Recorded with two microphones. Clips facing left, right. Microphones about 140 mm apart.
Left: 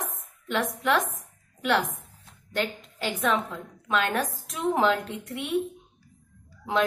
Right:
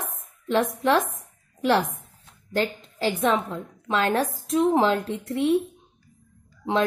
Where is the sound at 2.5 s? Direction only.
30° right (ahead or behind).